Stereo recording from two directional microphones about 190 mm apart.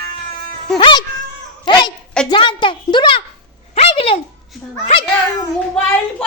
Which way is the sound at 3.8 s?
30° left (ahead or behind).